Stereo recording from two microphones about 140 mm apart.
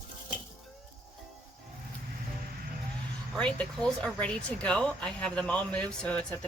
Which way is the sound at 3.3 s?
5° left (ahead or behind).